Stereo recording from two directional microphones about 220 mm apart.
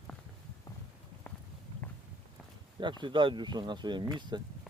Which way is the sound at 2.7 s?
20° right (ahead or behind).